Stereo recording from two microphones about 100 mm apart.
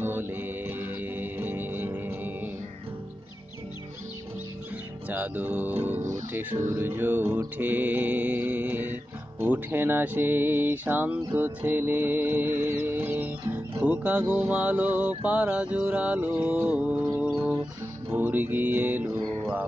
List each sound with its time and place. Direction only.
0.0 s music: 20° right (ahead or behind)
5.1 s mantra: 20° right (ahead or behind)
9.4 s music: 20° right (ahead or behind)
13.7 s mantra: 15° right (ahead or behind)
17.2 s music: 15° right (ahead or behind)